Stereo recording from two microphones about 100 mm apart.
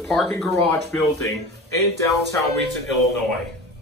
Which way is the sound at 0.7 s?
30° left (ahead or behind).